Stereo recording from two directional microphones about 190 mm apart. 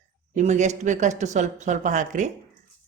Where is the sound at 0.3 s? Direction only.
40° right (ahead or behind).